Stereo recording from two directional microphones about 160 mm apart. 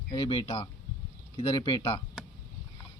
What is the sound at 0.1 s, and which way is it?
Speech, 35° left (ahead or behind).